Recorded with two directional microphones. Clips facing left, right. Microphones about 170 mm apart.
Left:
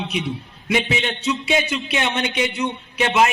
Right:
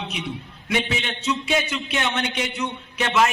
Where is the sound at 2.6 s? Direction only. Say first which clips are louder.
Left 4 dB; 30° left (ahead or behind).